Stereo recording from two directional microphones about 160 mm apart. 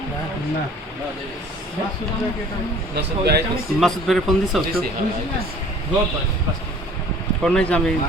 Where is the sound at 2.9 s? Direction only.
90° right.